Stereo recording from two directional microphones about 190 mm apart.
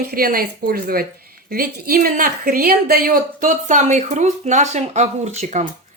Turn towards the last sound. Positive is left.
turn(degrees=-40)  # may be behind; listen again after turning